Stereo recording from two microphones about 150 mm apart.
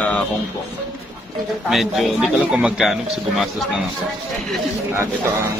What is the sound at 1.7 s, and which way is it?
Speech, centre (ahead or behind).